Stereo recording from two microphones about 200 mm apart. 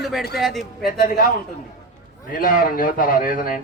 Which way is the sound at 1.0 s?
45° left (ahead or behind).